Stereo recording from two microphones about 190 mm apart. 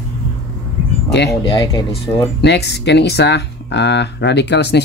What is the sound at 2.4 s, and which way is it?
Speech, 65° left (ahead or behind).